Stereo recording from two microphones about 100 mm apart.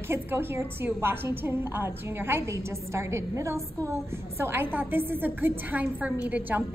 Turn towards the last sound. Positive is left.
turn(degrees=-15)  # may be behind; listen again after turning